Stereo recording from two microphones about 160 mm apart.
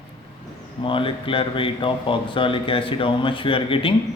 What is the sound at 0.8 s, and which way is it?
Speech, 35° left (ahead or behind).